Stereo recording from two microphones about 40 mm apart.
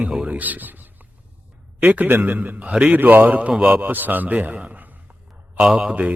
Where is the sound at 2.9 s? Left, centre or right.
Right.